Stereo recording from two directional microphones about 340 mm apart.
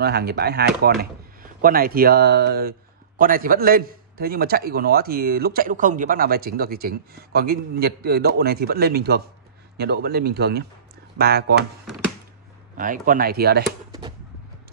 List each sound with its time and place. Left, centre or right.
0.0 s a man's voice: right
12.7 s a man's voice: right